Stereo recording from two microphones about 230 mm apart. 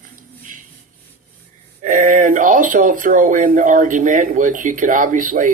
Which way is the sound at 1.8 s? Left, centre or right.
Right.